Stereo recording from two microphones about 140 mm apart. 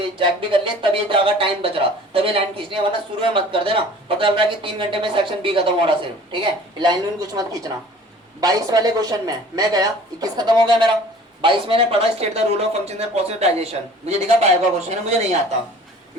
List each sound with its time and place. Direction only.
0.2 s speech: 40° right (ahead or behind)
14.8 s speech: 55° right (ahead or behind)